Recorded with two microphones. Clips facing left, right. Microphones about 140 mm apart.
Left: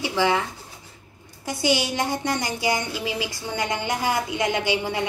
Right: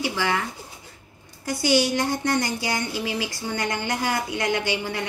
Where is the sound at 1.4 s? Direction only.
15° left (ahead or behind).